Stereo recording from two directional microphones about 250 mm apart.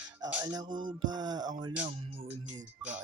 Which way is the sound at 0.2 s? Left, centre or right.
Centre.